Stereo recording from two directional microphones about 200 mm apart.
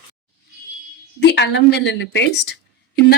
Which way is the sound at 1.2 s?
60° left (ahead or behind).